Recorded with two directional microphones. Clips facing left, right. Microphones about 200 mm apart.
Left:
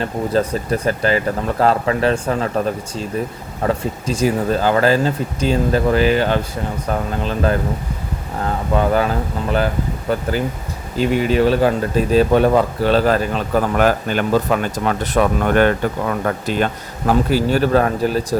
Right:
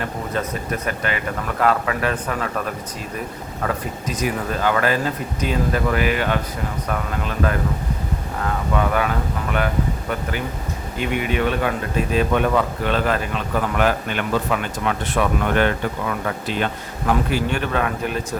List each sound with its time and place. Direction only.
0.0 s speech: 30° left (ahead or behind)